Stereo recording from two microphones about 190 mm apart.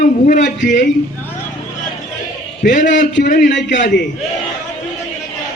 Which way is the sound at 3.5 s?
75° left (ahead or behind).